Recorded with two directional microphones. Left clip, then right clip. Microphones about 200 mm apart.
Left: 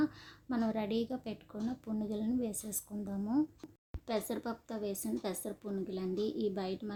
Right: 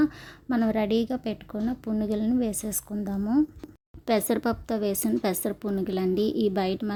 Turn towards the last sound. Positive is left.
turn(degrees=-40)  # may be behind; listen again after turning